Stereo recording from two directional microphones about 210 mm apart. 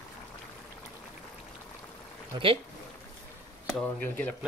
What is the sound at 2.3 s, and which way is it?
Speech, 25° right (ahead or behind).